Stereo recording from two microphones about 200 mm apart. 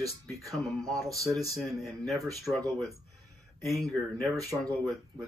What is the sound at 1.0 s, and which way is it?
Speech, 15° right (ahead or behind).